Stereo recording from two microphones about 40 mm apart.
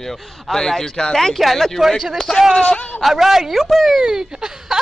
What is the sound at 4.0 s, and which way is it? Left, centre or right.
Speech, centre.